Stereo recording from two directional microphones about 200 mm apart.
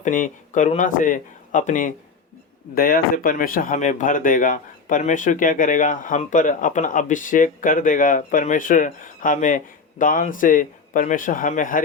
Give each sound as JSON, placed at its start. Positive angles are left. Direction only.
{"t": 0.0, "sound": "speech", "side_deg": 40}